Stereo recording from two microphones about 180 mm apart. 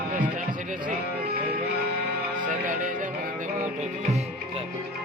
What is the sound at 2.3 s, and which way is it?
Music, 45° right (ahead or behind).